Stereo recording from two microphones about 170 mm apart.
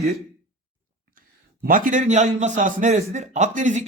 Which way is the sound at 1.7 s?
50° right (ahead or behind).